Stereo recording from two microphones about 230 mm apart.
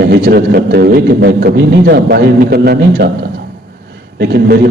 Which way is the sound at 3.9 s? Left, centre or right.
Right.